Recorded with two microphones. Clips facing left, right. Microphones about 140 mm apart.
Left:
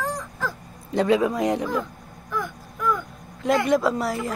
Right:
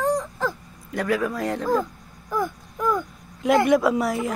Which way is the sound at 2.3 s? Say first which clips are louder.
Right 4 dB; 30° right (ahead or behind).